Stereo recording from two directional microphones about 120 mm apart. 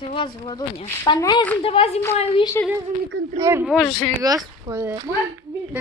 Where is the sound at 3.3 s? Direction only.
25° right (ahead or behind).